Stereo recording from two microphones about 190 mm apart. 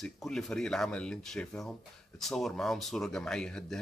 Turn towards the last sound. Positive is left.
turn(degrees=5)  # may be behind; listen again after turning